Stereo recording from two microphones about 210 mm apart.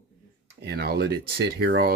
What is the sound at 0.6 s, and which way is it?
Speech, 50° right (ahead or behind).